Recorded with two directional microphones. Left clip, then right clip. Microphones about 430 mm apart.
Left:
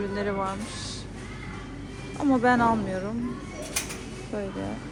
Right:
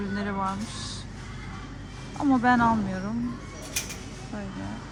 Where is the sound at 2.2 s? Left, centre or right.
Centre.